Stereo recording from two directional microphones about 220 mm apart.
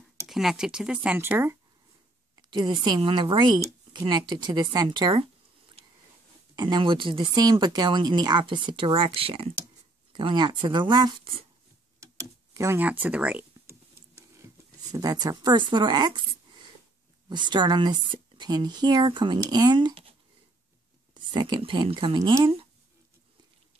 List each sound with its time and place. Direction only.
0.3 s speech: centre (ahead or behind); by 5.3 s 20° right (ahead or behind)
6.5 s speech: 20° right (ahead or behind)
12.0 s a sound: 15° right (ahead or behind)
14.9 s speech: 15° right (ahead or behind)
17.3 s speech: 20° right (ahead or behind)